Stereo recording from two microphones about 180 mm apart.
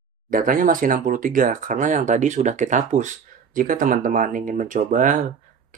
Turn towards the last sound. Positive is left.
turn(degrees=-45)  # may be behind; listen again after turning